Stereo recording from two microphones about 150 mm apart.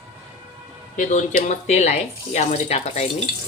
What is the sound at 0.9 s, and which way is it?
Speech, 60° left (ahead or behind).